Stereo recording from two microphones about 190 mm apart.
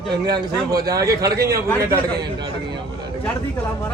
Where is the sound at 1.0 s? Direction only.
20° right (ahead or behind).